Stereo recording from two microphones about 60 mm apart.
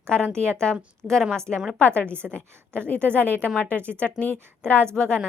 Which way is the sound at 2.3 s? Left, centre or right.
Centre.